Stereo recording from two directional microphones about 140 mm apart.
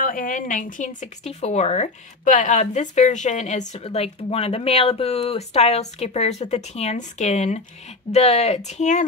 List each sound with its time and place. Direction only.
0.0 s speech: 75° left (ahead or behind); by 9.0 s 60° left (ahead or behind)